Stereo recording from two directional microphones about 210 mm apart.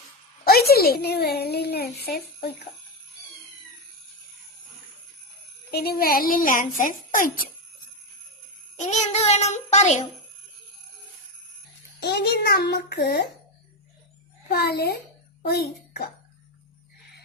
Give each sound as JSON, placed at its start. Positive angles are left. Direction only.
{"t": 0.7, "sound": "a child's voice", "side_deg": 45}
{"t": 5.7, "sound": "a child's voice", "side_deg": 45}
{"t": 8.7, "sound": "a sound", "side_deg": 35}
{"t": 11.9, "sound": "a child's voice", "side_deg": 50}
{"t": 14.4, "sound": "a child's voice", "side_deg": 50}